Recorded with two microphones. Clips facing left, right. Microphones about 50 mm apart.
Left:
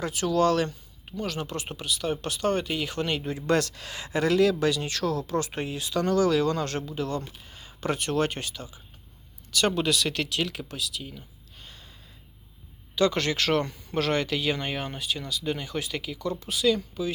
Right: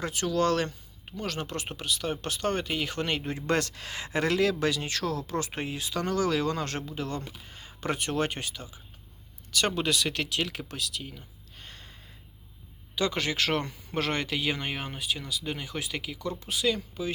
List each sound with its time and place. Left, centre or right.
0.0 s speech: right
10.7 s a sound: right
13.0 s speech: centre